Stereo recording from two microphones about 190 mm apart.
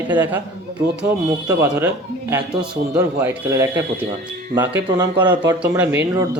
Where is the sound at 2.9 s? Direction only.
15° right (ahead or behind).